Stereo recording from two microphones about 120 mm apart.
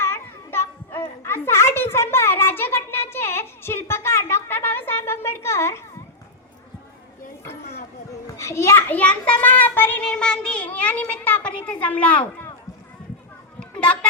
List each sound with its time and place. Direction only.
1.2 s a sound: 20° left (ahead or behind)
8.4 s a child's voice: 25° left (ahead or behind)
10.1 s a child's voice: 5° left (ahead or behind)
13.6 s children playing: 10° left (ahead or behind)